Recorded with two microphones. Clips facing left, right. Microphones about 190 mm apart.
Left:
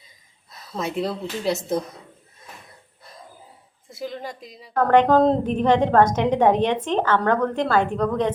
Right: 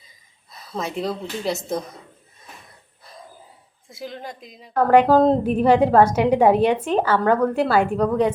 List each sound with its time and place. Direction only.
0.8 s speech: centre (ahead or behind)
3.8 s a woman's voice: centre (ahead or behind)